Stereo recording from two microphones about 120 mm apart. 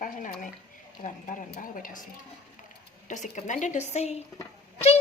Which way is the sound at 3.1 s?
90° left.